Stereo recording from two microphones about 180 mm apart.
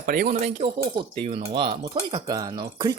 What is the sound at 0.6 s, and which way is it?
Speech, 30° right (ahead or behind).